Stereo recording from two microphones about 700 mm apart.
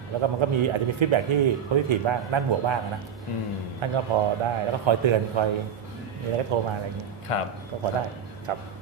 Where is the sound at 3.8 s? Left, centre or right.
Right.